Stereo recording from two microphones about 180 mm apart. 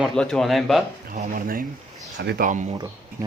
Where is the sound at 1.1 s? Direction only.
50° right (ahead or behind).